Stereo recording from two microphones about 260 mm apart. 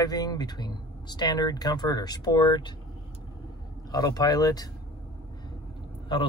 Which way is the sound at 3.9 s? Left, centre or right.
Centre.